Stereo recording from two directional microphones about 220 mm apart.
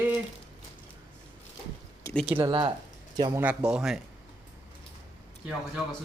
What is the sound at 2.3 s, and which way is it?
Speech, 20° right (ahead or behind).